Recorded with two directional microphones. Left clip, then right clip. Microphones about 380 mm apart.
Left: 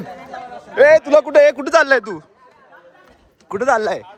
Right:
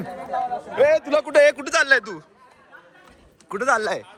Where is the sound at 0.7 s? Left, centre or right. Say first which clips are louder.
Left 8 dB; left.